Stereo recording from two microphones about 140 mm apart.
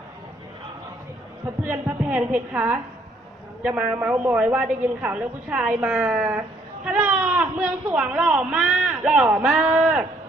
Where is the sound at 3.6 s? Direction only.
10° right (ahead or behind).